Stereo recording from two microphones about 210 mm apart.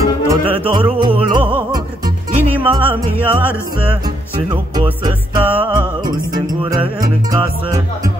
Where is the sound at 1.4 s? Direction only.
10° right (ahead or behind).